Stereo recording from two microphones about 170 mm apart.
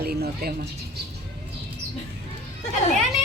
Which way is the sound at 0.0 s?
65° right (ahead or behind).